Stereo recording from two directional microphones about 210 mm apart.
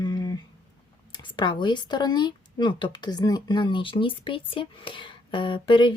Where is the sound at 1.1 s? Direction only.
20° left (ahead or behind).